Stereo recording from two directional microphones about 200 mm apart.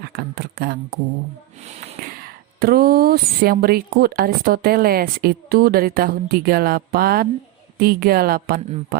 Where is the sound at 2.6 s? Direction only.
50° right (ahead or behind).